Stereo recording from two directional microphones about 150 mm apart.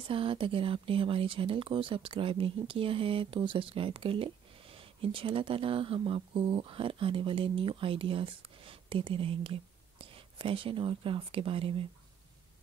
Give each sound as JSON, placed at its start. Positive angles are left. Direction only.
{"t": 0.1, "sound": "speech", "side_deg": -35}